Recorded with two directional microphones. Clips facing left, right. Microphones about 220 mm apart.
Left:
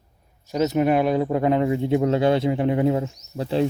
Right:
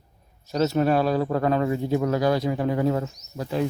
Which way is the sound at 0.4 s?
15° left (ahead or behind).